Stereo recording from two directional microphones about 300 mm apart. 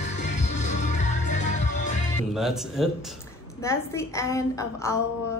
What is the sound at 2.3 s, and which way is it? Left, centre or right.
Speech, centre.